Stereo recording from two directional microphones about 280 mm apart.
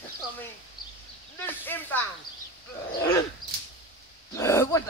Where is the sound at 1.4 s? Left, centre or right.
Centre.